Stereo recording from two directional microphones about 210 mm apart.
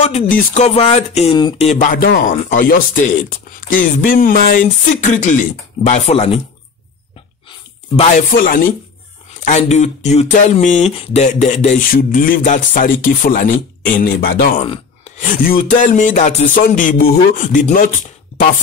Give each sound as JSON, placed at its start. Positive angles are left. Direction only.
{"t": 0.0, "sound": "speech", "side_deg": 35}
{"t": 7.4, "sound": "a sound", "side_deg": 25}
{"t": 8.3, "sound": "speech", "side_deg": 45}
{"t": 14.6, "sound": "sigh", "side_deg": 25}
{"t": 15.2, "sound": "speech", "side_deg": 40}